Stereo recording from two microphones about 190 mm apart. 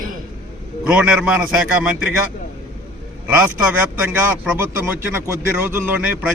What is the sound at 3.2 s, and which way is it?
A man's voice, 5° right (ahead or behind).